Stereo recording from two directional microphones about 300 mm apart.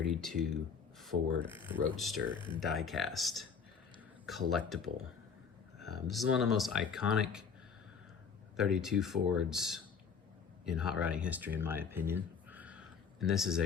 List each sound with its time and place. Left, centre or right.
0.0 s speech: centre
2.3 s speech: centre
2.6 s speech: centre
5.9 s speech: centre
8.5 s speech: centre